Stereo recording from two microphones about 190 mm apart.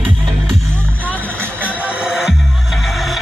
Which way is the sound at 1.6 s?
10° right (ahead or behind).